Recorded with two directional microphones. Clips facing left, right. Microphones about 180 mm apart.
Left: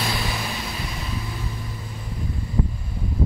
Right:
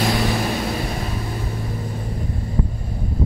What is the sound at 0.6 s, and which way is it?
Vehicle, 50° right (ahead or behind).